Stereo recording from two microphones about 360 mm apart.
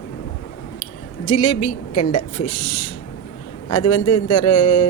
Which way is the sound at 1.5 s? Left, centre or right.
Left.